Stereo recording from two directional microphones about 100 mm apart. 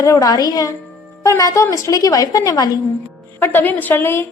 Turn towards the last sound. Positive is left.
turn(degrees=20)  # may be behind; listen again after turning